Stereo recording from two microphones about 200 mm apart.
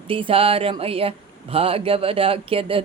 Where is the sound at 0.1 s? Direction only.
25° right (ahead or behind).